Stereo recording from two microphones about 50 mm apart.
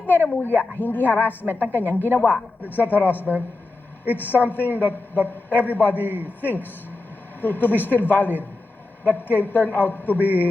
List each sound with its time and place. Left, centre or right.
0.1 s a woman's voice: left
6.1 s a man's voice: right
6.4 s a woman's voice: left